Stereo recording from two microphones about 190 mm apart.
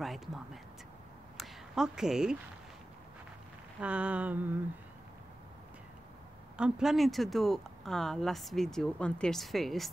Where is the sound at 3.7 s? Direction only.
5° right (ahead or behind).